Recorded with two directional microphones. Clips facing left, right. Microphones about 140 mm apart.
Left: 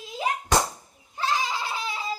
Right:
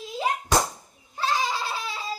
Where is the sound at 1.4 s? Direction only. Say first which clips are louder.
Right 1 dB; 15° left (ahead or behind).